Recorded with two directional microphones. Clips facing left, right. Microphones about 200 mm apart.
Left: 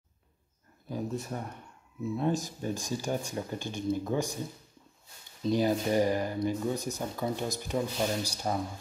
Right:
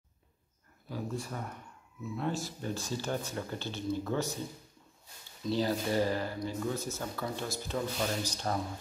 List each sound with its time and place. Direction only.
0.8 s speech: 20° left (ahead or behind)
5.4 s speech: 15° left (ahead or behind)